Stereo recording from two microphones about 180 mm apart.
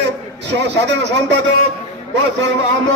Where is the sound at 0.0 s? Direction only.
75° right (ahead or behind).